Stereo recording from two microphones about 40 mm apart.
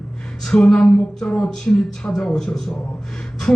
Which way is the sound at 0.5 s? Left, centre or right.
Left.